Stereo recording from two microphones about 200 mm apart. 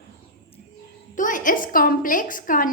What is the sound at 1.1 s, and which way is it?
A woman's voice, 40° left (ahead or behind).